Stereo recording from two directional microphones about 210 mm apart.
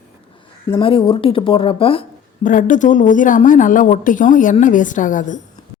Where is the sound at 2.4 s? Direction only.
40° left (ahead or behind).